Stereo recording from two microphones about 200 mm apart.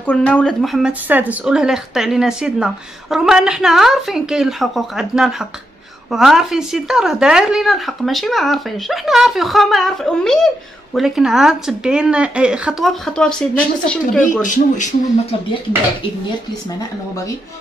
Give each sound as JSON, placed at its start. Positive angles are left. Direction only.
{"t": 0.0, "sound": "speech", "side_deg": 5}
{"t": 14.2, "sound": "speech", "side_deg": 40}